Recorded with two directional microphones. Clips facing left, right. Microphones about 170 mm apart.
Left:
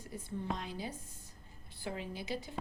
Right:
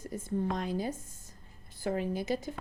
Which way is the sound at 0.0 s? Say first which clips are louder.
Right 7 dB; 45° right (ahead or behind).